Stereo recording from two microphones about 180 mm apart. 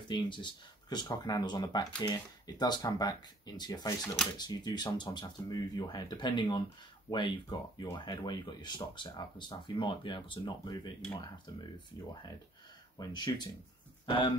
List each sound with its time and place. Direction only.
0.1 s speech: 25° left (ahead or behind)
12.9 s speech: 25° left (ahead or behind)